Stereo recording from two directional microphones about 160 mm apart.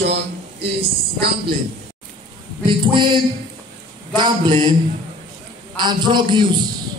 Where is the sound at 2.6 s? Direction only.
30° right (ahead or behind).